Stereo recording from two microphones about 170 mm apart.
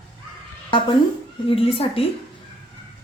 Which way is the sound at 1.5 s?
35° left (ahead or behind).